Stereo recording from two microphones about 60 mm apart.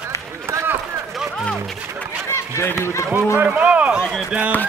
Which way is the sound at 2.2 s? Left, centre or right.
Left.